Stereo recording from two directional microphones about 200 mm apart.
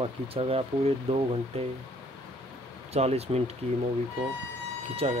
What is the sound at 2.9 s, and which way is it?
Speech, 30° right (ahead or behind).